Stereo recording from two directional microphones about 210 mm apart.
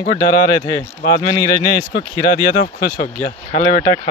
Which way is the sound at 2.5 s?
45° left (ahead or behind).